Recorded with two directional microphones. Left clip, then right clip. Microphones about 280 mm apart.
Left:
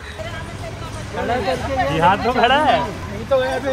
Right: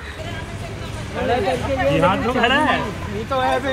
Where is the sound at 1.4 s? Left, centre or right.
Left.